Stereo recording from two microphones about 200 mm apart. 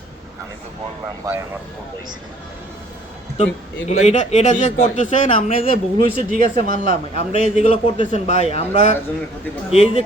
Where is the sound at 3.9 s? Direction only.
35° left (ahead or behind).